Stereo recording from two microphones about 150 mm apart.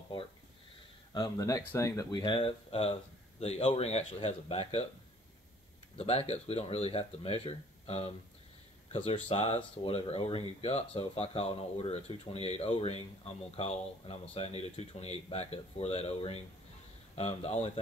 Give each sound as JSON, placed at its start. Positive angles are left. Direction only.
{"t": 1.1, "sound": "speech", "side_deg": 25}
{"t": 2.2, "sound": "speech", "side_deg": 35}
{"t": 5.9, "sound": "speech", "side_deg": 45}